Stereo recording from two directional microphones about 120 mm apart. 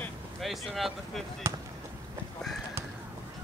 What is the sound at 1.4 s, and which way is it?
Basketball bounce, 25° right (ahead or behind).